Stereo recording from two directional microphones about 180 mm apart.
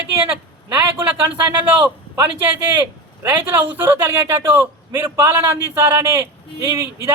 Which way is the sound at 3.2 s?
10° right (ahead or behind).